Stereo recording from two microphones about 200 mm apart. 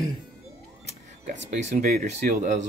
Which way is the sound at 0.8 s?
35° right (ahead or behind).